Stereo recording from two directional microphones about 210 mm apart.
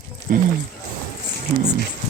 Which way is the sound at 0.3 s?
40° right (ahead or behind).